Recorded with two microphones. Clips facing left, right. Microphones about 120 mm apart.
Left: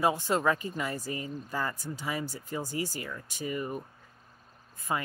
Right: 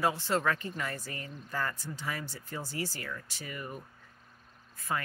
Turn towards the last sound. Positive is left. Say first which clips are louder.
# left 2 dB
turn(degrees=20)  # may be behind; listen again after turning